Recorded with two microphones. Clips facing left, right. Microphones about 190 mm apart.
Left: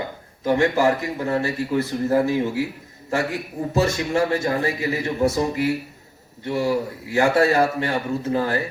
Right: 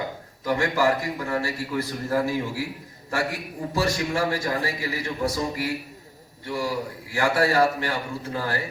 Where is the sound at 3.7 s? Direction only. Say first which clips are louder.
Left 4 dB; 25° left (ahead or behind).